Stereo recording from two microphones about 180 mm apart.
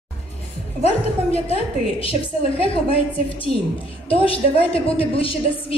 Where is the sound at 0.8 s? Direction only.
35° left (ahead or behind).